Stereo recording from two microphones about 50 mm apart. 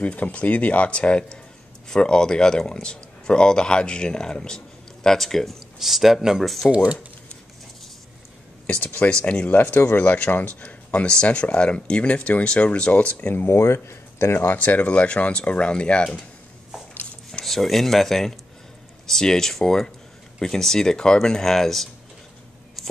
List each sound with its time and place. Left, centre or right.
0.0 s speech: left; by 5.6 s centre
5.8 s a man's voice: centre
6.7 s speech: right
8.6 s speech: left
9.6 s speech: left
13.5 s speech: left; by 16.3 s centre
17.5 s speech: centre